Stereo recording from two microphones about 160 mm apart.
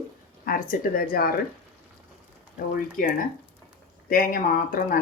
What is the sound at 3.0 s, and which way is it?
Speech, 60° left (ahead or behind).